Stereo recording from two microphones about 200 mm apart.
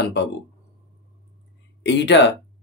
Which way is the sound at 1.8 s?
60° left (ahead or behind).